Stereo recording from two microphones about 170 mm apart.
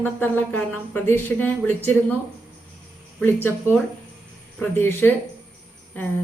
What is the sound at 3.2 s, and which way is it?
Speech, 10° left (ahead or behind).